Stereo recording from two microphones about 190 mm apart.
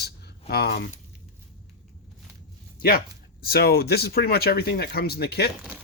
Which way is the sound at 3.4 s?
55° left (ahead or behind).